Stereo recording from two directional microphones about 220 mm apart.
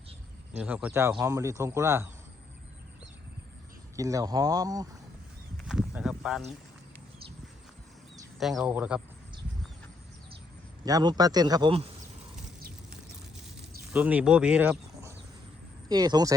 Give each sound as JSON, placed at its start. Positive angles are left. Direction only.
{"t": 0.5, "sound": "speech", "side_deg": -5}
{"t": 3.9, "sound": "speech", "side_deg": -15}
{"t": 5.6, "sound": "a sound", "side_deg": -5}
{"t": 8.4, "sound": "speech", "side_deg": 0}
{"t": 10.8, "sound": "speech", "side_deg": -15}
{"t": 13.9, "sound": "speech", "side_deg": -5}
{"t": 15.9, "sound": "speech", "side_deg": -20}